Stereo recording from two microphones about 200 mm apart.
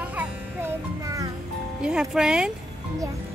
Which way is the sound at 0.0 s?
10° right (ahead or behind).